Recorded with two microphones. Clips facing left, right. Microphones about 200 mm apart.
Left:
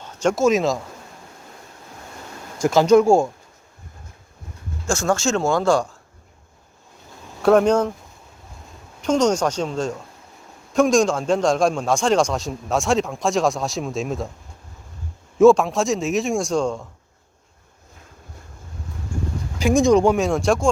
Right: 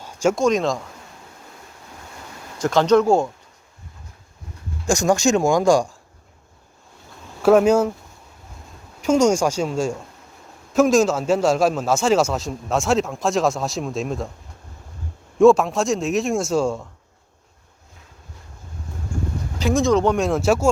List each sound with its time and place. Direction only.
0.0 s a sound: 10° right (ahead or behind)
0.3 s a man's voice: 5° left (ahead or behind)
2.6 s speech: 10° left (ahead or behind)
4.9 s speech: 15° right (ahead or behind)
7.4 s speech: 5° right (ahead or behind)
9.0 s a man's voice: 10° right (ahead or behind)
15.4 s a man's voice: centre (ahead or behind)
19.5 s speech: 15° left (ahead or behind)
20.1 s a man's voice: centre (ahead or behind)